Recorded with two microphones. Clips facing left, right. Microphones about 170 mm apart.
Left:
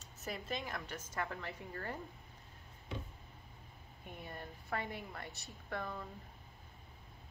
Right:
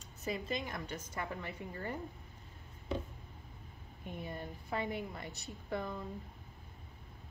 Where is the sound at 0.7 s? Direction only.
15° right (ahead or behind).